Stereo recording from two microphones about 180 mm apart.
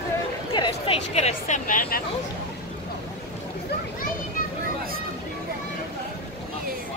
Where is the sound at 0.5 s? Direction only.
25° left (ahead or behind).